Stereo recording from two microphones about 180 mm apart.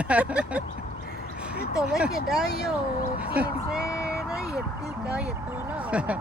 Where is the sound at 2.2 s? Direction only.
55° left (ahead or behind).